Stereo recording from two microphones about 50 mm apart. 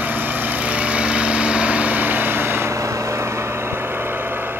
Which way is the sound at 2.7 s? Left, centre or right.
Right.